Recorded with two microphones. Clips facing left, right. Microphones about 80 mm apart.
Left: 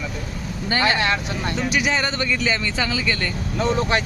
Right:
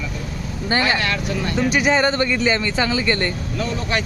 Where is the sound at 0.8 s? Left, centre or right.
Left.